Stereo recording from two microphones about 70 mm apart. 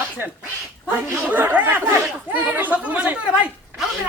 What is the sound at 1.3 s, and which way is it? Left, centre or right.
Speech, right.